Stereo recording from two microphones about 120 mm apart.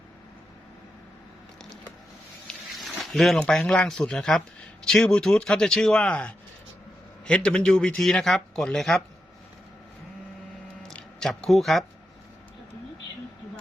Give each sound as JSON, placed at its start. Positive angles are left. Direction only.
{"t": 3.0, "sound": "a sound", "side_deg": 0}
{"t": 3.3, "sound": "a man's voice", "side_deg": 5}
{"t": 10.8, "sound": "speech", "side_deg": 5}